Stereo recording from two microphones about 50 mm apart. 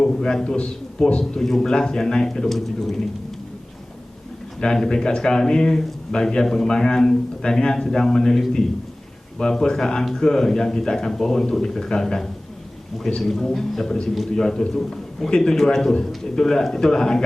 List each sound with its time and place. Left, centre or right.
0.0 s a man's voice: centre
4.6 s a man's voice: centre
9.4 s a man's voice: centre